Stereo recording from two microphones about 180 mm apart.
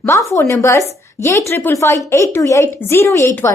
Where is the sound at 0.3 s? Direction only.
15° left (ahead or behind).